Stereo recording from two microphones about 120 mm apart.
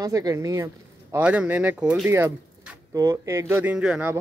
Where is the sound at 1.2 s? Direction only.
10° right (ahead or behind).